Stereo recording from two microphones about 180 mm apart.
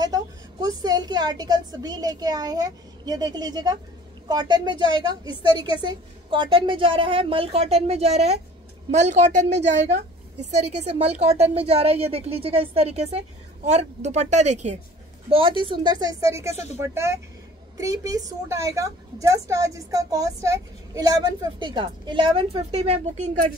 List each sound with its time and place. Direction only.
0.0 s a woman's voice: 20° right (ahead or behind); by 23.5 s 40° right (ahead or behind)